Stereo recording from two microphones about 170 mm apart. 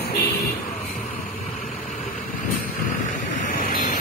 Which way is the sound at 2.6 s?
50° left (ahead or behind).